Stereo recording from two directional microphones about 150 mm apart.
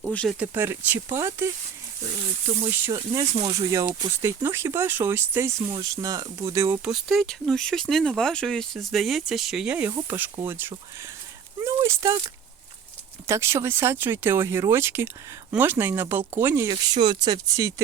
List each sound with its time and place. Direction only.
0.1 s speech: 5° left (ahead or behind)
0.3 s speech: 10° right (ahead or behind)
2.6 s speech: 15° right (ahead or behind)
6.8 s speech: centre (ahead or behind); by 12.2 s 25° right (ahead or behind)
13.2 s speech: 20° right (ahead or behind)
16.7 s speech: 30° right (ahead or behind)